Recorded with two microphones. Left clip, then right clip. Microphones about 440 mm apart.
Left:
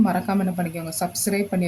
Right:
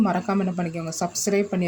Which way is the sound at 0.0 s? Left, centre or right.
Left.